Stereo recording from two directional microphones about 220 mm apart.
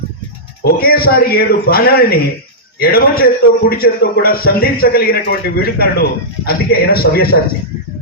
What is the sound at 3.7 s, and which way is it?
A man's voice, 45° left (ahead or behind).